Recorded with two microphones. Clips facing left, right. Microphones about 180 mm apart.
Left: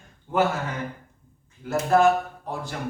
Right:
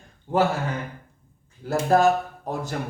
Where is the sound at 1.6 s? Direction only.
35° right (ahead or behind).